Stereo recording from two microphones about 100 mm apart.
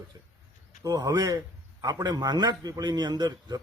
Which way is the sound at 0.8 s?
35° right (ahead or behind).